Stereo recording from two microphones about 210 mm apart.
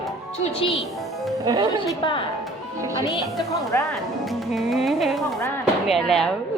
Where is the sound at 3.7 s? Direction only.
10° left (ahead or behind).